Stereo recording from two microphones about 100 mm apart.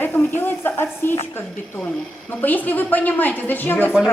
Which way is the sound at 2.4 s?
15° left (ahead or behind).